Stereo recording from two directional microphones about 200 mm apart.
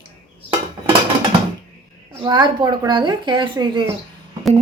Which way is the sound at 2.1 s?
25° right (ahead or behind).